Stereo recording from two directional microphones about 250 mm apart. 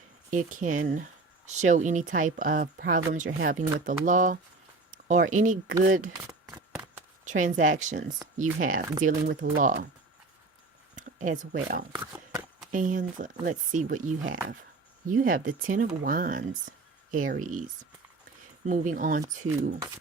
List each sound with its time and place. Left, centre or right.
0.3 s speech: right
6.2 s shuffling cards: centre
7.3 s speech: right
10.9 s speech: right
11.9 s a sound: centre
12.7 s speech: right
15.0 s speech: right